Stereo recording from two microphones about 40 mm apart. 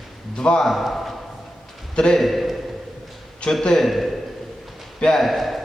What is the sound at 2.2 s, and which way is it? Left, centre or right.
Speech, centre.